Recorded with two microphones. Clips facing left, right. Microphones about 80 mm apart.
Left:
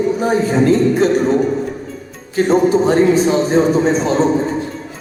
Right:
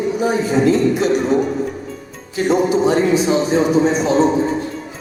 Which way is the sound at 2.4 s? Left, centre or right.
Left.